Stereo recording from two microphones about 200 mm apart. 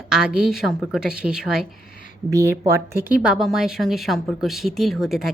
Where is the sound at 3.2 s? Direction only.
Centre (ahead or behind).